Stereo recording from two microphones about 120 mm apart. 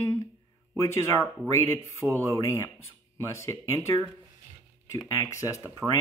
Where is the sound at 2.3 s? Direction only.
25° left (ahead or behind).